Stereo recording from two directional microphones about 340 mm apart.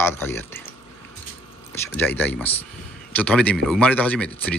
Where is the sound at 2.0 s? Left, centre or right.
Centre.